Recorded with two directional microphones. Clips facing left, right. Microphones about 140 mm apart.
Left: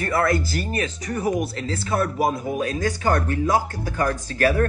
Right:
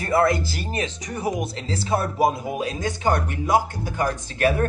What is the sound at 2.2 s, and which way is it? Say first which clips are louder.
Speech: right 1 dB; 25° right (ahead or behind).